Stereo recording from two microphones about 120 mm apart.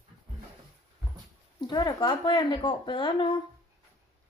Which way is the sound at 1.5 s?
35° left (ahead or behind).